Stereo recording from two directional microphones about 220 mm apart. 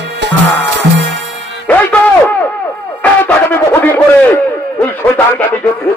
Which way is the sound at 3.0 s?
5° left (ahead or behind).